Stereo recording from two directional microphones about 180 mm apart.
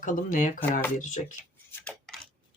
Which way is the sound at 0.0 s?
45° left (ahead or behind).